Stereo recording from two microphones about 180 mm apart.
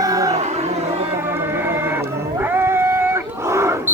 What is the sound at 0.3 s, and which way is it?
Music, 40° right (ahead or behind).